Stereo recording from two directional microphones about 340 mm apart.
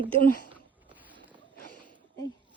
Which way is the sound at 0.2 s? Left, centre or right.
Right.